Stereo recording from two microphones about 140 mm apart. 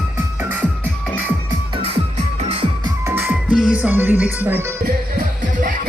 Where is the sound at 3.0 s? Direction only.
15° right (ahead or behind).